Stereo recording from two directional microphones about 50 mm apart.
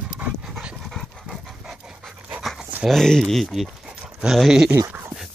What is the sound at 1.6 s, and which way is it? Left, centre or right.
Pant, centre.